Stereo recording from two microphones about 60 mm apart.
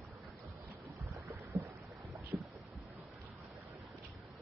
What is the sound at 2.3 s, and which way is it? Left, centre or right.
Boat, centre.